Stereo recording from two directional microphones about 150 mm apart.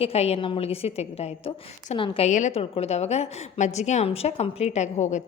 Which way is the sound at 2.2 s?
50° left (ahead or behind).